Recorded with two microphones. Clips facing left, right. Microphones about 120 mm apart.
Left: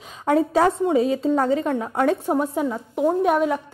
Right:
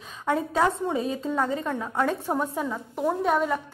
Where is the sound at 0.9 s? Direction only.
90° left.